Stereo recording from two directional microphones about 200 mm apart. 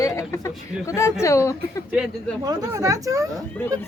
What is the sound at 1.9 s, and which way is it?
Speech, 5° right (ahead or behind).